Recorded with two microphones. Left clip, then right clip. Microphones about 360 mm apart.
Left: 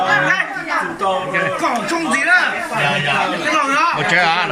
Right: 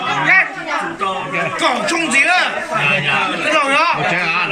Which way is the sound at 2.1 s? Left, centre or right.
Centre.